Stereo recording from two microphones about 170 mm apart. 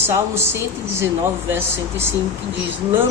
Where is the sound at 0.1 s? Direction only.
15° right (ahead or behind).